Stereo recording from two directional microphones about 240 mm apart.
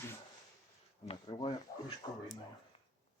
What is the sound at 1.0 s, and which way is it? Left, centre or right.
Speech, left.